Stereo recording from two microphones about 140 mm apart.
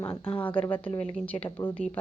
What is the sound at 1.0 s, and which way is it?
Speech, 10° left (ahead or behind).